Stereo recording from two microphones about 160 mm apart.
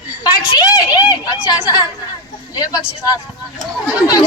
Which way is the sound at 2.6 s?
25° left (ahead or behind).